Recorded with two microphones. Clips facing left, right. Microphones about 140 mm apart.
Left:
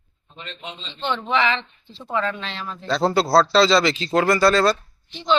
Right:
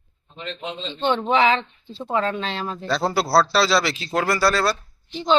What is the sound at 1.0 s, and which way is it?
A woman's voice, 40° right (ahead or behind).